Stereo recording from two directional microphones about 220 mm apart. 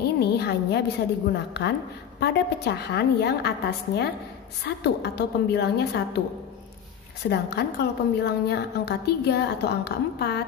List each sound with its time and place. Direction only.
0.2 s a sound: 50° left (ahead or behind)
1.3 s a woman's voice: 50° left (ahead or behind)
7.2 s a woman's voice: 50° left (ahead or behind)